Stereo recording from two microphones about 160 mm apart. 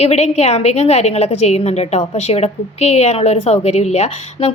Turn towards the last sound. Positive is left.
turn(degrees=40)  # may be behind; listen again after turning